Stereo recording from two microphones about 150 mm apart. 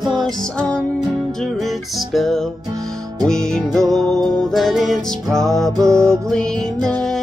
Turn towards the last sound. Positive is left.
turn(degrees=5)  # may be behind; listen again after turning